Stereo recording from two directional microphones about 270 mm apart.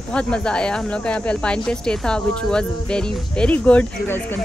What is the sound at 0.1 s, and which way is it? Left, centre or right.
Speech, centre.